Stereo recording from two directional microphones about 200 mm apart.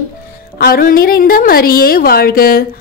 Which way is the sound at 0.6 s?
45° left (ahead or behind).